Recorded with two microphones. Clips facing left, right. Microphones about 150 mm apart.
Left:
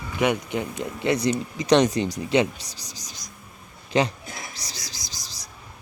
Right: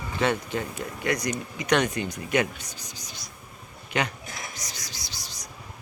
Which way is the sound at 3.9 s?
30° left (ahead or behind).